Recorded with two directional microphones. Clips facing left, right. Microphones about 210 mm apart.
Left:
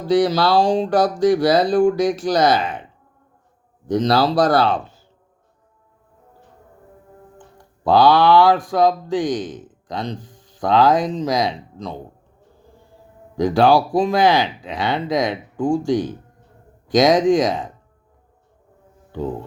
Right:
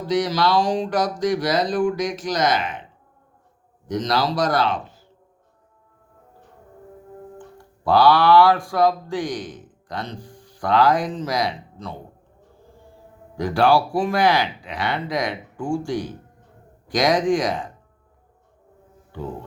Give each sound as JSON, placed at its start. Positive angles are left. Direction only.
{"t": 0.1, "sound": "speech", "side_deg": 30}
{"t": 3.8, "sound": "speech", "side_deg": 30}
{"t": 7.9, "sound": "speech", "side_deg": 20}
{"t": 13.4, "sound": "speech", "side_deg": 20}